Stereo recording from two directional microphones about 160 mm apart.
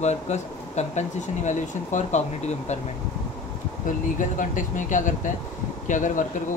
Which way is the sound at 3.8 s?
55° left (ahead or behind).